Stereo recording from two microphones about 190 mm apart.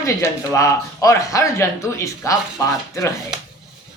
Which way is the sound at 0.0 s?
15° left (ahead or behind).